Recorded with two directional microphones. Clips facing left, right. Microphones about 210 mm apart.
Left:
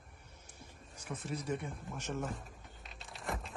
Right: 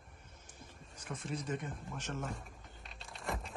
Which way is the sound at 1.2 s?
10° left (ahead or behind).